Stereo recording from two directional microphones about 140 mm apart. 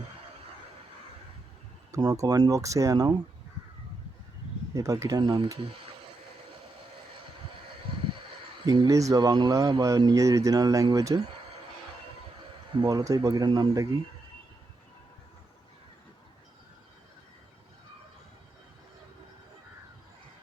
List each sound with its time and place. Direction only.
1.9 s speech: 25° right (ahead or behind)
4.7 s speech: 25° right (ahead or behind)
8.6 s speech: 30° right (ahead or behind)
12.8 s speech: 25° right (ahead or behind)